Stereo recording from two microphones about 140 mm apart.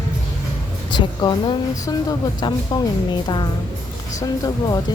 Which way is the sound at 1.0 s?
30° left (ahead or behind).